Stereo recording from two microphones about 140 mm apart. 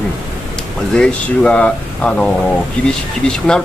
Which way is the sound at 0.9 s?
5° left (ahead or behind).